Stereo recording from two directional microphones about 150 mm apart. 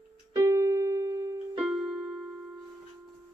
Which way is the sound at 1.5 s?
5° right (ahead or behind).